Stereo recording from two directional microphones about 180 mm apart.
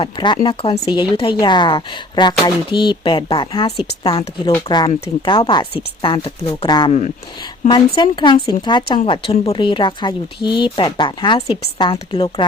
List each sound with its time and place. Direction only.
0.0 s speech: 25° left (ahead or behind)